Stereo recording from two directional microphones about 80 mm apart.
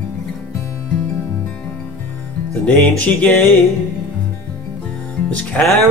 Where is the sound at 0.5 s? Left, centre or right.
Left.